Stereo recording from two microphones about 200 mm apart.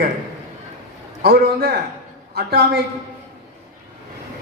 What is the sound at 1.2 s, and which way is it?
A man's voice, 50° right (ahead or behind).